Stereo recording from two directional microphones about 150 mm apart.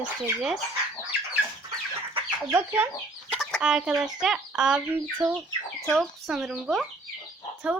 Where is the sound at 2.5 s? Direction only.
20° right (ahead or behind).